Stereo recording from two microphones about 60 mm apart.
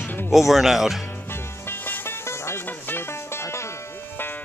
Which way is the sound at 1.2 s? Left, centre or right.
Left.